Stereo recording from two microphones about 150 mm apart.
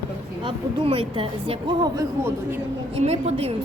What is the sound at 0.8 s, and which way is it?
Speech, 40° right (ahead or behind).